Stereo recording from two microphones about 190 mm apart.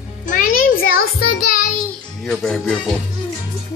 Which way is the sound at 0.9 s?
50° left (ahead or behind).